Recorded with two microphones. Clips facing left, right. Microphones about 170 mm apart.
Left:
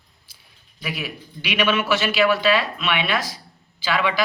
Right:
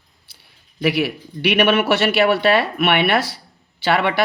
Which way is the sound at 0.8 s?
70° right (ahead or behind).